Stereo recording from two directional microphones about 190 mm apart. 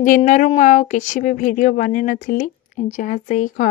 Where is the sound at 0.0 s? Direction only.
40° left (ahead or behind).